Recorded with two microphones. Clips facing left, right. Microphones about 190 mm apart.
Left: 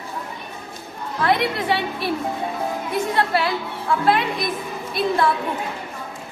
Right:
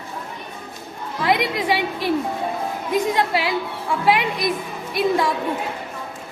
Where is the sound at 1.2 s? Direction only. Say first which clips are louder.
Even; 15° right (ahead or behind).